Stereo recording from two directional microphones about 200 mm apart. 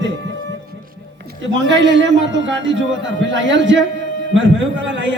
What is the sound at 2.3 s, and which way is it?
A man's voice, 65° right (ahead or behind).